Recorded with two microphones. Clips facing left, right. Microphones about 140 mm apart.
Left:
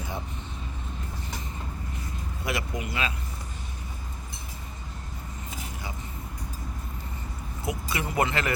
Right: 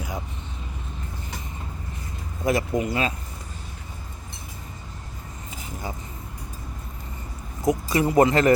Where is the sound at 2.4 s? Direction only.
40° right (ahead or behind).